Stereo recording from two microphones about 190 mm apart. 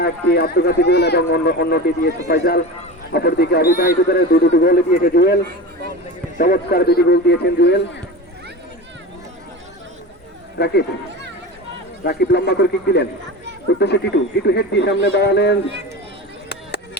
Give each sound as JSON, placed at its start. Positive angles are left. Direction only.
{"t": 0.0, "sound": "a man's voice", "side_deg": 55}
{"t": 10.6, "sound": "speech", "side_deg": 60}
{"t": 12.0, "sound": "speech", "side_deg": 60}
{"t": 16.5, "sound": "chop", "side_deg": 60}